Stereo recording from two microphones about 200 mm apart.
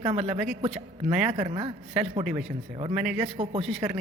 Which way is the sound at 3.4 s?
30° right (ahead or behind).